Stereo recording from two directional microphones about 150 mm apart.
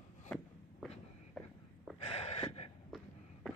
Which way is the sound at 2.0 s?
45° left (ahead or behind).